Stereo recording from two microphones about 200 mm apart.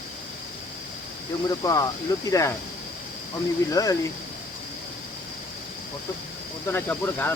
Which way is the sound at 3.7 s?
15° left (ahead or behind).